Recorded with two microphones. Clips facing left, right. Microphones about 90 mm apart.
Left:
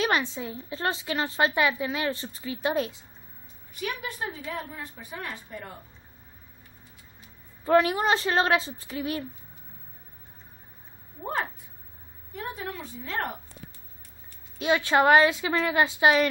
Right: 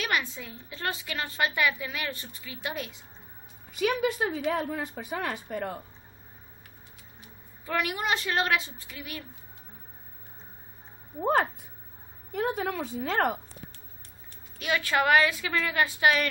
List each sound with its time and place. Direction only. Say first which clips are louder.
0.0 s a woman's voice: left 4 dB; 25° left (ahead or behind)
3.7 s a woman's voice: right 7 dB; 90° right
7.6 s a woman's voice: left 8 dB; 30° left (ahead or behind)
12.3 s a woman's voice: right 6 dB; 80° right
14.6 s a woman's voice: left 5 dB; 25° left (ahead or behind)